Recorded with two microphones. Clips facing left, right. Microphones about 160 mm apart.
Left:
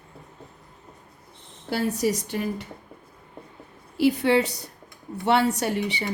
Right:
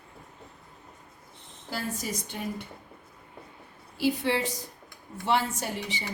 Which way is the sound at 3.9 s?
70° left (ahead or behind).